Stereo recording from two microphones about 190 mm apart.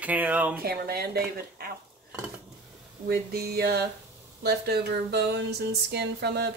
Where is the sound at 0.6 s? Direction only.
55° right (ahead or behind).